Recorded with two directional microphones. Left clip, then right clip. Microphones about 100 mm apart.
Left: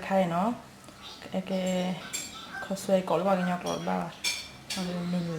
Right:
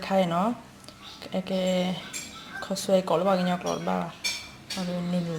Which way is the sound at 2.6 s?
15° right (ahead or behind).